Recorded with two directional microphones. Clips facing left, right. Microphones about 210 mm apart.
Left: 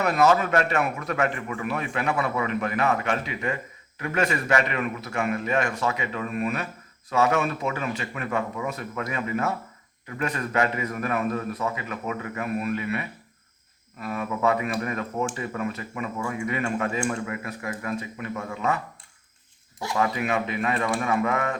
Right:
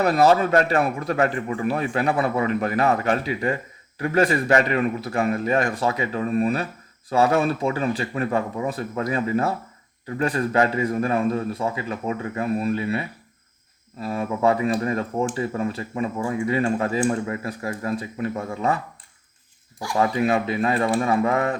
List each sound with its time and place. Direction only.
0.0 s a man's voice: 35° right (ahead or behind)
20.0 s a man's voice: 30° right (ahead or behind)